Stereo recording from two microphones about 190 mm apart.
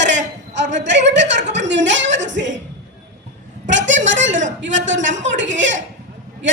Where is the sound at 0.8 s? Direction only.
70° right (ahead or behind).